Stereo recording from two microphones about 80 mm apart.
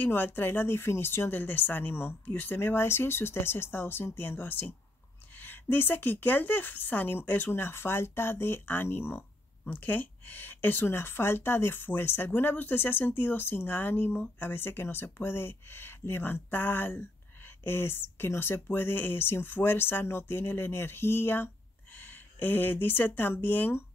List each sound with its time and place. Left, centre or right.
0.0 s speech: left